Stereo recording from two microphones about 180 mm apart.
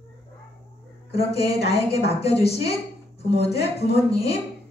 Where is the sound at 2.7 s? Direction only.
35° left (ahead or behind).